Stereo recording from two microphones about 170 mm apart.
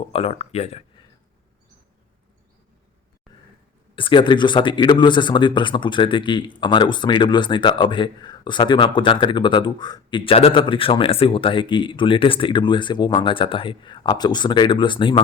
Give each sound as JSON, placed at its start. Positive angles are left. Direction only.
{"t": 0.1, "sound": "speech", "side_deg": 35}
{"t": 3.9, "sound": "speech", "side_deg": 30}